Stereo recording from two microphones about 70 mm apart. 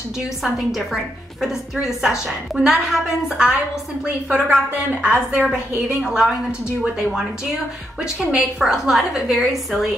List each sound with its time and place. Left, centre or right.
0.4 s a woman's voice: centre; by 5.5 s right
6.0 s a woman's voice: centre